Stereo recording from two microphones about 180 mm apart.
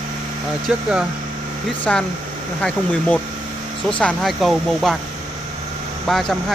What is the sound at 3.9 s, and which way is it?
Speech, 5° left (ahead or behind).